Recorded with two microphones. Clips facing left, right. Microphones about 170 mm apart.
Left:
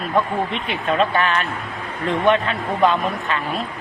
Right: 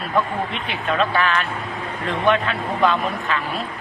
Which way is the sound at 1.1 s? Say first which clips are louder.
Left 1 dB; 40° left (ahead or behind).